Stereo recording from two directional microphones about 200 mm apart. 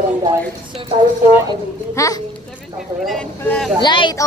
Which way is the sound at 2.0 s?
15° left (ahead or behind).